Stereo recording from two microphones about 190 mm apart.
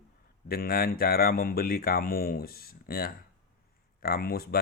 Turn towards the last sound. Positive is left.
turn(degrees=55)  # may be behind; listen again after turning